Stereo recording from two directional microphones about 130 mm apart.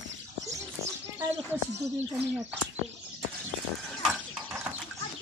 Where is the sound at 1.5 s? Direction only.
15° right (ahead or behind).